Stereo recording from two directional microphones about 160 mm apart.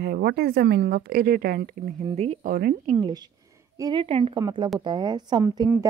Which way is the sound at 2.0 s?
40° right (ahead or behind).